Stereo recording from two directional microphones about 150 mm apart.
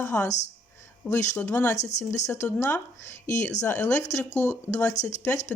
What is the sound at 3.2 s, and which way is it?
Speech, 55° left (ahead or behind).